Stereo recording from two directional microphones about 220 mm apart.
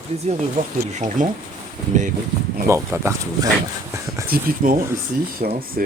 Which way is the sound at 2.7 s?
10° right (ahead or behind).